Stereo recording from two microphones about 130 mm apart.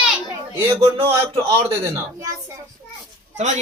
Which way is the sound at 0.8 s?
50° right (ahead or behind).